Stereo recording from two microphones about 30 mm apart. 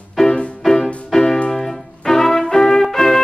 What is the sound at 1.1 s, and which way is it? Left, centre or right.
Music, centre.